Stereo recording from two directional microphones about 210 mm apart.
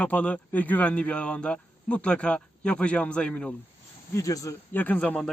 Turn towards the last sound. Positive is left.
turn(degrees=5)  # may be behind; listen again after turning